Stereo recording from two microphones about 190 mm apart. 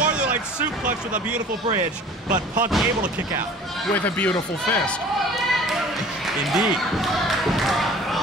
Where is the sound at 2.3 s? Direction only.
45° right (ahead or behind).